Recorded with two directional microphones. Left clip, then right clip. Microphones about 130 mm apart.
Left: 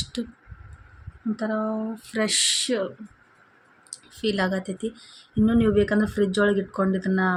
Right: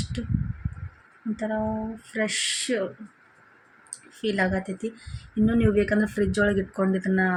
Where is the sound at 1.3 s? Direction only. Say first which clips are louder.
Left 1 dB; 25° left (ahead or behind).